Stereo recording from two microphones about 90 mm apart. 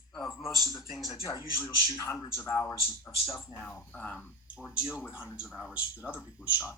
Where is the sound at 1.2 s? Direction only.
35° left (ahead or behind).